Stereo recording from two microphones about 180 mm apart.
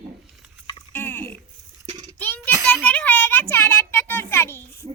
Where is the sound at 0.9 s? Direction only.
10° left (ahead or behind).